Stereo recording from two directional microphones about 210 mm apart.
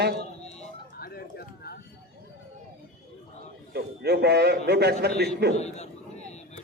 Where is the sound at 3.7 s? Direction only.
50° right (ahead or behind).